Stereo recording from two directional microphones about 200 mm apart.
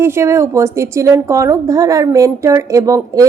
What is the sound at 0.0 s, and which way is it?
A woman's voice, 15° right (ahead or behind).